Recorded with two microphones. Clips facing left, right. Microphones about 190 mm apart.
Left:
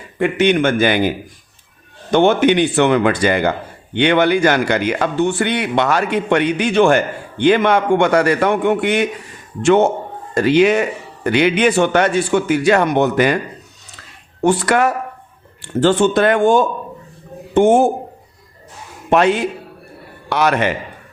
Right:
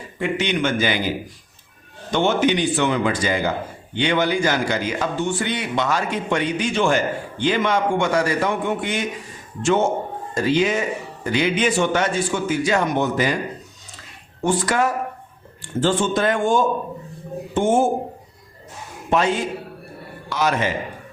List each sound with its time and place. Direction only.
0.2 s a man's voice: 55° left (ahead or behind)
14.4 s speech: 65° left (ahead or behind)
19.1 s a man's voice: 65° left (ahead or behind)